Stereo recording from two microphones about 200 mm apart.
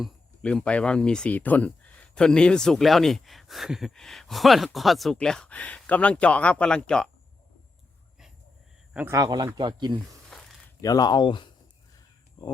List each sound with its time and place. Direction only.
0.0 s speech: 5° left (ahead or behind)
8.9 s speech: 10° right (ahead or behind)
10.2 s a sound: centre (ahead or behind)
10.8 s speech: 20° left (ahead or behind)